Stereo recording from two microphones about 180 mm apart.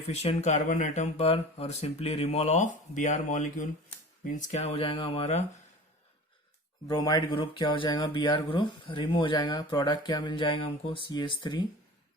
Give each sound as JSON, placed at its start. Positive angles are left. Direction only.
{"t": 0.1, "sound": "speech", "side_deg": 35}
{"t": 6.8, "sound": "speech", "side_deg": 20}